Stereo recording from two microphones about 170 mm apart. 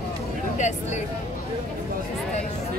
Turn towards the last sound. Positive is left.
turn(degrees=45)  # may be behind; listen again after turning